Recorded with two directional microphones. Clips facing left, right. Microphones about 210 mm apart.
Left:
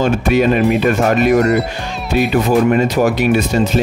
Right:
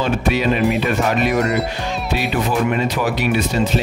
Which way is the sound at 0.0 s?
50° left (ahead or behind).